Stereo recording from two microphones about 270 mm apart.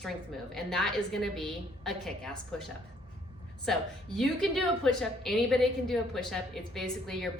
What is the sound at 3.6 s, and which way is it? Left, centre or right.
A woman's voice, centre.